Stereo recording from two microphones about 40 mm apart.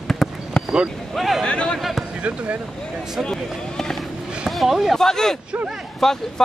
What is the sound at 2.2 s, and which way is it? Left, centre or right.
Speech, right.